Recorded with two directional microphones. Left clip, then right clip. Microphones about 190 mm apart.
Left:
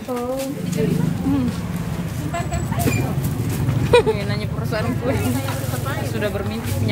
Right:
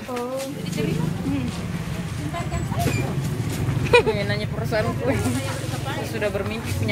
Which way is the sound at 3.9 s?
10° left (ahead or behind).